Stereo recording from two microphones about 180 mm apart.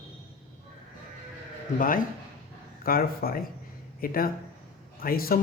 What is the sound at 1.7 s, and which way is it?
Speech, 50° left (ahead or behind).